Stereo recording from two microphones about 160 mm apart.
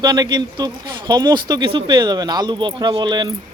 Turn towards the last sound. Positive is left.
turn(degrees=-25)  # may be behind; listen again after turning